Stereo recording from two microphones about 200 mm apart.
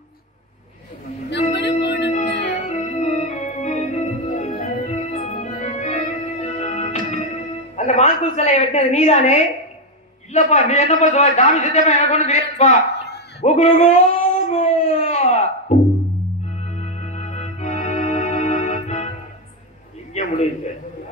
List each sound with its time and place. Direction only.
1.6 s music: 60° left (ahead or behind)
2.6 s organ: 35° left (ahead or behind)
6.6 s music: 35° left (ahead or behind)
7.7 s a woman's voice: 35° left (ahead or behind)
12.9 s a sound: 55° left (ahead or behind)
13.4 s dog: 35° left (ahead or behind)
15.7 s music: 35° left (ahead or behind)
16.7 s organ: 35° left (ahead or behind)
20.2 s a sound: 35° left (ahead or behind)